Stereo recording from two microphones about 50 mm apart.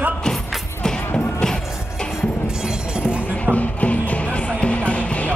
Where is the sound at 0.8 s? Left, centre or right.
Centre.